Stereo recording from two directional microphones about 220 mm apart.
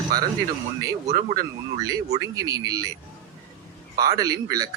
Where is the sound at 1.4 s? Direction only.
15° right (ahead or behind).